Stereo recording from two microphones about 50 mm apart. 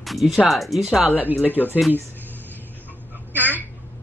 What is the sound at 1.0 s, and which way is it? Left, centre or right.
Speech, right.